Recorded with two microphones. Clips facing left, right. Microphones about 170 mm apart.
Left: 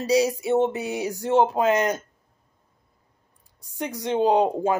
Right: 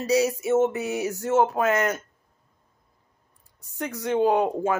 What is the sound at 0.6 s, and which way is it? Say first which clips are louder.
Speech: right 2 dB; 15° left (ahead or behind).